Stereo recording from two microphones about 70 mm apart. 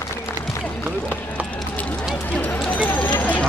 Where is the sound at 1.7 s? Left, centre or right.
Centre.